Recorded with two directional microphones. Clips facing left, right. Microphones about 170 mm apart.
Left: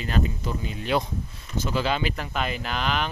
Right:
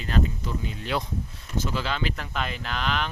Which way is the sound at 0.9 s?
20° left (ahead or behind).